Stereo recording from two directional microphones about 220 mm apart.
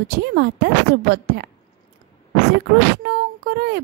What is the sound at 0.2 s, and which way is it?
Speech, 50° right (ahead or behind).